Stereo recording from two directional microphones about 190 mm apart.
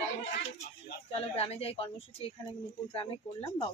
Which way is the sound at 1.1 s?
30° left (ahead or behind).